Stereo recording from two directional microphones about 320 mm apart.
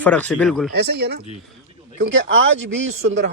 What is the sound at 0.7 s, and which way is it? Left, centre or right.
Speech, right.